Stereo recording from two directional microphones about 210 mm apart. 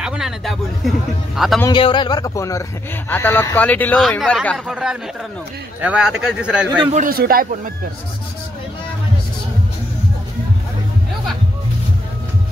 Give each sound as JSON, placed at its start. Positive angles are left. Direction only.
{"t": 0.0, "sound": "a man's voice", "side_deg": -5}
{"t": 1.6, "sound": "a man's voice", "side_deg": 20}
{"t": 6.9, "sound": "speech", "side_deg": -40}